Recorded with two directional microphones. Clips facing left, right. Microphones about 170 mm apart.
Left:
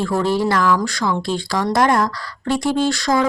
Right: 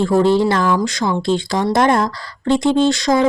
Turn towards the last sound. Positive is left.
turn(degrees=-20)  # may be behind; listen again after turning